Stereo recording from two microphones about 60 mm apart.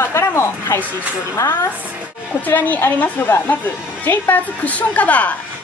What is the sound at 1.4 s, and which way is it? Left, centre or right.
Speech, left.